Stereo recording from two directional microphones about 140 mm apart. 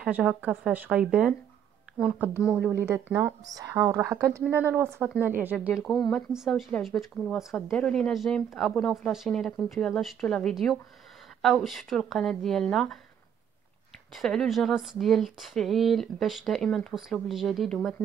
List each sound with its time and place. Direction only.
0.0 s speech: 5° right (ahead or behind)
2.7 s speech: 20° right (ahead or behind); by 13.0 s centre (ahead or behind)
14.1 s speech: centre (ahead or behind)